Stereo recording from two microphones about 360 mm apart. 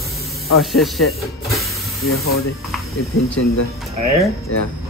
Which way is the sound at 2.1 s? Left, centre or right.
Left.